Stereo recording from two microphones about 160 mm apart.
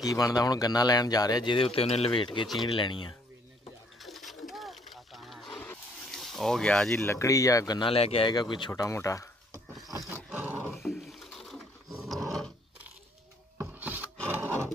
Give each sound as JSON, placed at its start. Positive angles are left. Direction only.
{"t": 0.0, "sound": "speech", "side_deg": 20}
{"t": 4.0, "sound": "roaring cats", "side_deg": 0}
{"t": 7.0, "sound": "speech", "side_deg": 15}
{"t": 7.9, "sound": "speech", "side_deg": 35}
{"t": 10.0, "sound": "roar", "side_deg": -10}
{"t": 10.7, "sound": "roaring cats", "side_deg": 0}
{"t": 13.6, "sound": "filing", "side_deg": -10}